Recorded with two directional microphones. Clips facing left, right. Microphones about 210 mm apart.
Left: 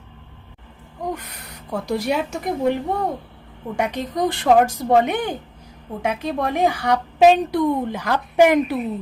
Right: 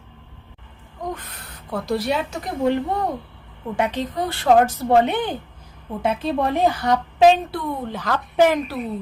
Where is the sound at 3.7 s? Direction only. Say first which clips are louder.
Left 1 dB; 10° left (ahead or behind).